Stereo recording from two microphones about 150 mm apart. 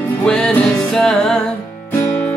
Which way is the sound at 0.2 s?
5° left (ahead or behind).